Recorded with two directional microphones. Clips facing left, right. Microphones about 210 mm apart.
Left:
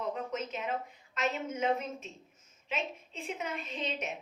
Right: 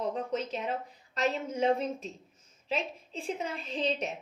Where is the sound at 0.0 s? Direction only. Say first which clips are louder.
Right 3 dB; 35° right (ahead or behind).